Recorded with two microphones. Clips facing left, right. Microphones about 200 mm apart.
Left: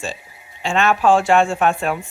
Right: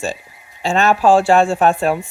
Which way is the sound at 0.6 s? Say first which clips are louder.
Right 3 dB; 40° right (ahead or behind).